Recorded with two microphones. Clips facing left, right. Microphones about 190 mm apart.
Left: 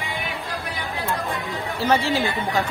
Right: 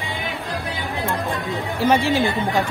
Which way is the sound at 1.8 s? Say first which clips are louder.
Right 3 dB; 15° right (ahead or behind).